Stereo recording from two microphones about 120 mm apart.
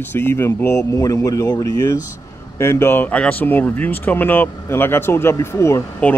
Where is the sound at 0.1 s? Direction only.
20° left (ahead or behind).